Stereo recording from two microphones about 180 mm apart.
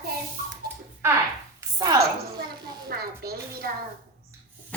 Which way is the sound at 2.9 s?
55° right (ahead or behind).